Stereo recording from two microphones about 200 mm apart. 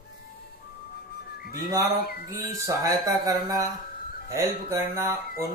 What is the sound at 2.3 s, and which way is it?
Speech, 15° right (ahead or behind).